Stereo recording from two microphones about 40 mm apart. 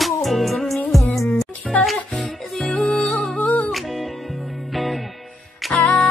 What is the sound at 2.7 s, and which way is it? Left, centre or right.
Music, left.